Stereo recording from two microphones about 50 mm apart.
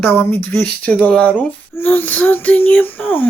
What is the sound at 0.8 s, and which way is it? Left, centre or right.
Speech, left.